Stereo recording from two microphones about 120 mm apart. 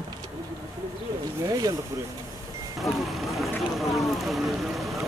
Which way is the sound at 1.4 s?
30° right (ahead or behind).